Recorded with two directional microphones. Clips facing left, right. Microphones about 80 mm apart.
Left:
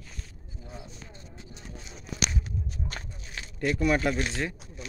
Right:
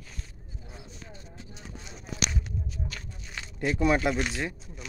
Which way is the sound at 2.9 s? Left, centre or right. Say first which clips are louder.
Left 3 dB; left.